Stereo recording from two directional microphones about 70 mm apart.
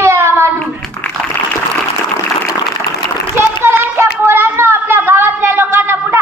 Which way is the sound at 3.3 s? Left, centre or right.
Right.